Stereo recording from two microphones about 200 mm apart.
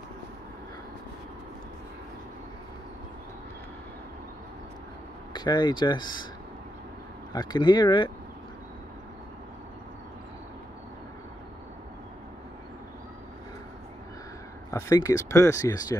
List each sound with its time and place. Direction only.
5.3 s speech: 20° left (ahead or behind)
7.3 s speech: 20° left (ahead or behind)
14.7 s speech: 15° left (ahead or behind)